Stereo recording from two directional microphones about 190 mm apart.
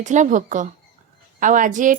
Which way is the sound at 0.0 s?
40° right (ahead or behind).